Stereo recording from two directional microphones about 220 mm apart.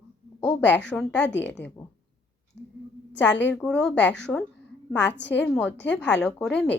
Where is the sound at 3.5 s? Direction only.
5° left (ahead or behind).